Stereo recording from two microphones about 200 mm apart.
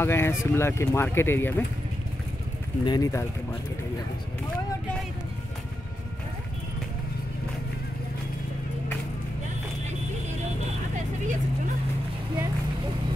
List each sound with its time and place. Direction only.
0.0 s speech: 10° left (ahead or behind)
2.8 s speech: 20° left (ahead or behind)